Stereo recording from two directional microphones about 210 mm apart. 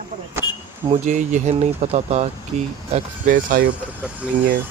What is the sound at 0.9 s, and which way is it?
Speech, 35° right (ahead or behind).